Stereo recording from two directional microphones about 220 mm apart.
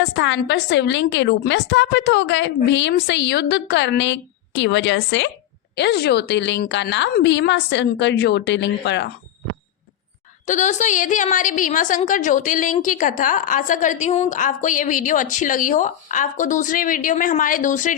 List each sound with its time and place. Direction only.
0.0 s a woman's voice: 55° left (ahead or behind)
10.4 s a woman's voice: 35° left (ahead or behind)